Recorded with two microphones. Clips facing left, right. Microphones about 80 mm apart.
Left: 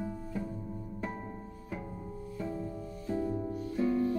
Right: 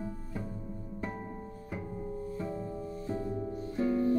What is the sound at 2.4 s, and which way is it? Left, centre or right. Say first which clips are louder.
Music: right 1 dB; right.